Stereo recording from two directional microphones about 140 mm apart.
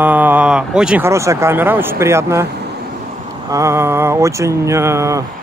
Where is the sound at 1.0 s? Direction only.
20° right (ahead or behind).